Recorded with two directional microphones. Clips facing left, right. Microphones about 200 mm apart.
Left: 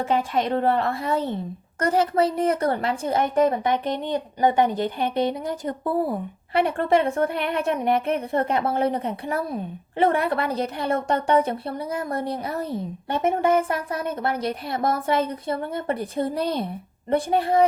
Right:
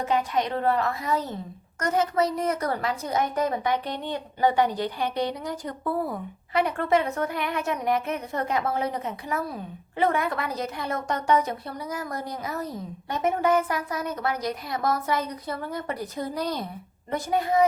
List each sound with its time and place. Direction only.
0.0 s a woman's voice: 25° left (ahead or behind)